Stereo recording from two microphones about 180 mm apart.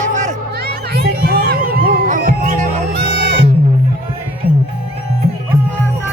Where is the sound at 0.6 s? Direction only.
60° right (ahead or behind).